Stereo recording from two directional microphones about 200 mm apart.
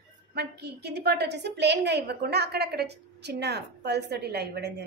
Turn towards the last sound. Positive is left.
turn(degrees=-55)  # may be behind; listen again after turning